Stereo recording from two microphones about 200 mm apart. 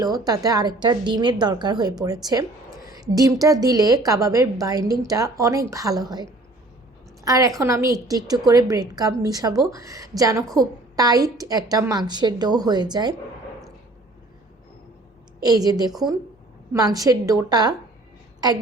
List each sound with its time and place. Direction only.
0.0 s a woman's voice: 20° right (ahead or behind)
7.3 s a woman's voice: 15° right (ahead or behind)
15.4 s a woman's voice: 20° right (ahead or behind)